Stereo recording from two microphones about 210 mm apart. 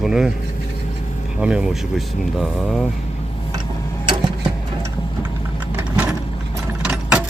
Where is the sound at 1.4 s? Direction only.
5° right (ahead or behind).